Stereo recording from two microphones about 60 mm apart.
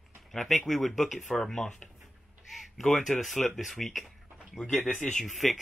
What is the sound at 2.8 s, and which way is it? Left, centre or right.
Speech, centre.